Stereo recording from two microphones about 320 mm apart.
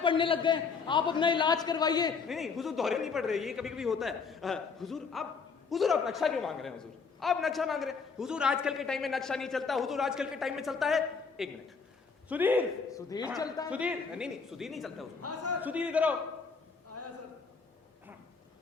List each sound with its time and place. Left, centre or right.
0.0 s a man's voice: centre
2.2 s a man's voice: centre
12.9 s a man's voice: centre
13.7 s a man's voice: centre
15.2 s a man's voice: right
15.6 s a man's voice: centre